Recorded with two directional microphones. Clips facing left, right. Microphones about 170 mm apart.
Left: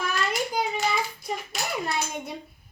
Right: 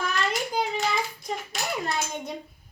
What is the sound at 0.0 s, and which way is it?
Hands, 5° left (ahead or behind).